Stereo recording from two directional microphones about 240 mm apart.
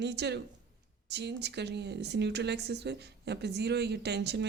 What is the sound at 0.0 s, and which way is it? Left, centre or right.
Speech, right.